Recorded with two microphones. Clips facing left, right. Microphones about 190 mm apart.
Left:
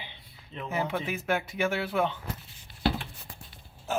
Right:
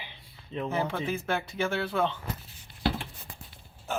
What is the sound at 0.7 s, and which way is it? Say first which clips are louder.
Speech: left 1 dB; 15° left (ahead or behind).